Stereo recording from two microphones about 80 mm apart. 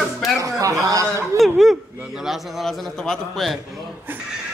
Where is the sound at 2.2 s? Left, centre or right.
Centre.